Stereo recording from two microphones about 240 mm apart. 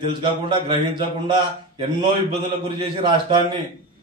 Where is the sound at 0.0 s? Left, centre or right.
Centre.